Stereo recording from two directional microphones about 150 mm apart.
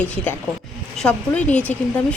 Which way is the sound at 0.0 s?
10° left (ahead or behind).